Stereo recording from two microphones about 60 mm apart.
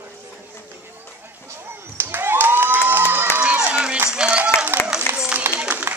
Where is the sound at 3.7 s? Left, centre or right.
Centre.